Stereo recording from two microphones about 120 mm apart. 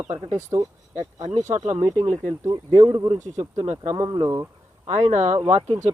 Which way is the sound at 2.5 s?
35° right (ahead or behind).